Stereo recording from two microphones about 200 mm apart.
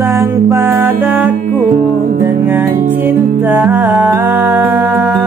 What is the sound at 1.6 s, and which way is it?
Music, 45° right (ahead or behind).